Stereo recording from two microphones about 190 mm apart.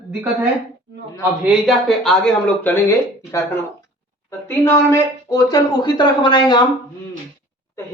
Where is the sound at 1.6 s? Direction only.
Centre (ahead or behind); by 6.6 s 25° left (ahead or behind).